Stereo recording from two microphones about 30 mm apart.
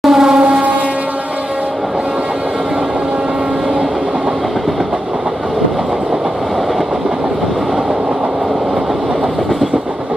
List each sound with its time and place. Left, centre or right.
0.0 s vehicle: centre